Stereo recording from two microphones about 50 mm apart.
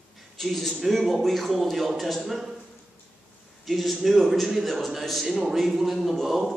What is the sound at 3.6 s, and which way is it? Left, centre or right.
A man's voice, centre.